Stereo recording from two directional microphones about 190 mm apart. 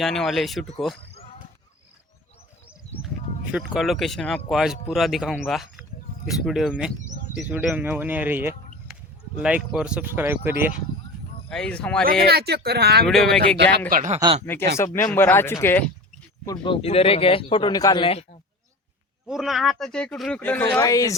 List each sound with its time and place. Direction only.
0.0 s speech: centre (ahead or behind)
3.5 s speech: centre (ahead or behind)
11.4 s speech: 5° left (ahead or behind)
12.3 s speech: 55° right (ahead or behind)
13.1 s speech: centre (ahead or behind)
13.9 s speech: 40° right (ahead or behind)
14.9 s speech: 10° left (ahead or behind)
16.5 s speech: 25° left (ahead or behind)
19.3 s speech: centre (ahead or behind); by 21.2 s 15° left (ahead or behind)